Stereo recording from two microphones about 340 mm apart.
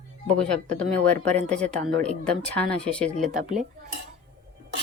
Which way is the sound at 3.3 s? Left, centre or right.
Right.